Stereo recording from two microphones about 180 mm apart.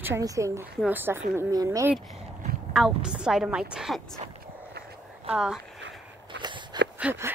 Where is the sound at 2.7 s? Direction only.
5° right (ahead or behind).